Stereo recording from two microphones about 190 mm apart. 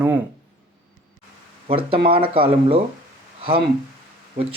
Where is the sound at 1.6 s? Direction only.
30° right (ahead or behind).